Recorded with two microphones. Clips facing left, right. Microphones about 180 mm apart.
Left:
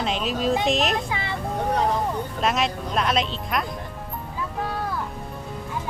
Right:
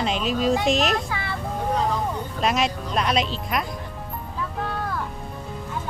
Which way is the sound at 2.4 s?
Centre (ahead or behind).